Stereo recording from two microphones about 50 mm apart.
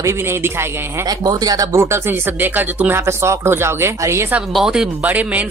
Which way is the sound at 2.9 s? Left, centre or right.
Right.